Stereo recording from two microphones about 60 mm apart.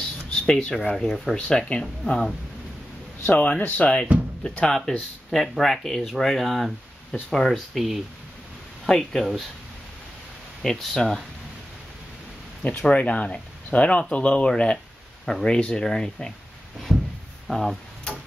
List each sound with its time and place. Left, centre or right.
0.3 s a sound: centre
0.9 s speech: centre
3.3 s speech: left; by 9.2 s centre
9.2 s speech: centre
10.6 s speech: centre
12.8 s speech: left
15.2 s speech: centre
16.9 s a sound: centre
17.5 s speech: centre